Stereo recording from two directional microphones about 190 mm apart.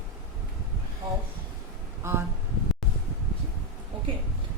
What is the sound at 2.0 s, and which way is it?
Speech, 15° right (ahead or behind).